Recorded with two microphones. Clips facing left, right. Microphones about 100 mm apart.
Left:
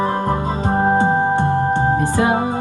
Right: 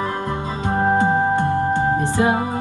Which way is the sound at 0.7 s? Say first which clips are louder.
Left 1 dB; 30° left (ahead or behind).